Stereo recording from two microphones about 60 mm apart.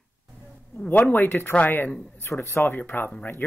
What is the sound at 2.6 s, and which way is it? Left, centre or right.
Speech, left.